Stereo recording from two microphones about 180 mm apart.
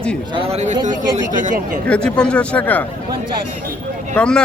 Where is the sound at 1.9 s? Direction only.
5° left (ahead or behind).